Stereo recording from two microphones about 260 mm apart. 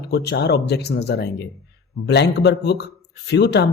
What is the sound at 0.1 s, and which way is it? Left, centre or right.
Speech, left.